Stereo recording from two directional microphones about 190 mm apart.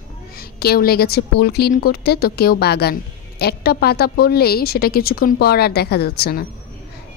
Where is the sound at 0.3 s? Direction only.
55° left (ahead or behind).